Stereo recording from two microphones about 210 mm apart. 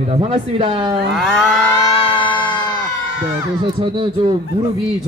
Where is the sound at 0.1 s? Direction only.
25° right (ahead or behind).